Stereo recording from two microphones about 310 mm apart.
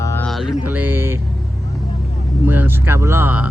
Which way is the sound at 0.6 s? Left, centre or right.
Centre.